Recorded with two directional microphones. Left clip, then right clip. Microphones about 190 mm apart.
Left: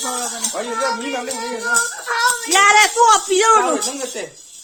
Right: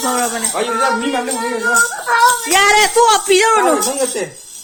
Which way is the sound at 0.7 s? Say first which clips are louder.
Right 5 dB; 35° left (ahead or behind).